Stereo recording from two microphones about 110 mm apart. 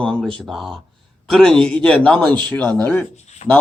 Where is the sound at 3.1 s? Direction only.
90° left.